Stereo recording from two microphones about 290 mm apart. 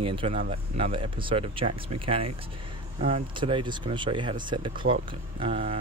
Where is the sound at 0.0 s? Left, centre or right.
Centre.